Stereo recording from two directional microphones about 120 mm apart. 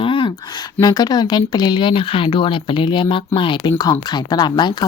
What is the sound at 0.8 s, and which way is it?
Speech, 35° left (ahead or behind).